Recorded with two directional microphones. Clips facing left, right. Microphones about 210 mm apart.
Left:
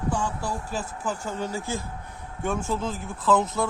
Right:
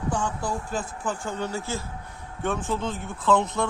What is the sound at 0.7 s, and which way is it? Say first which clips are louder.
Speech: right 1 dB; 10° left (ahead or behind).